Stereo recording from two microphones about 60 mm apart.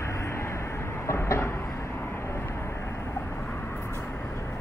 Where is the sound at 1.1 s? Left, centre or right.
Left.